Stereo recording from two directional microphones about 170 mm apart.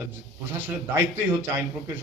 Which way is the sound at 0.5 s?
10° right (ahead or behind).